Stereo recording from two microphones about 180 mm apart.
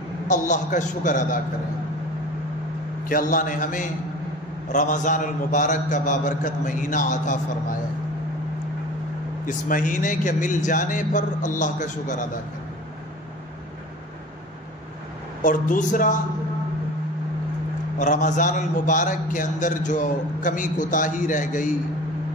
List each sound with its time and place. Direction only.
0.3 s a man's voice: 45° left (ahead or behind)
3.1 s a man's voice: 50° left (ahead or behind)
9.5 s a man's voice: 45° left (ahead or behind)
15.4 s a man's voice: 45° left (ahead or behind)
17.9 s a man's voice: 45° left (ahead or behind)